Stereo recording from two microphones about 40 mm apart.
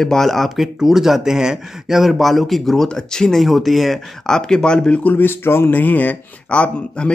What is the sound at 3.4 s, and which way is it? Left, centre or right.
Speech, centre.